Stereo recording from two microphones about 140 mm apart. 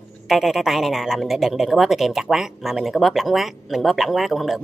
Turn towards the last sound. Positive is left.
turn(degrees=0)  # may be behind; listen again after turning